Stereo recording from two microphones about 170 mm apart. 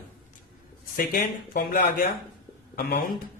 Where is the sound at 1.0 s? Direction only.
50° left (ahead or behind).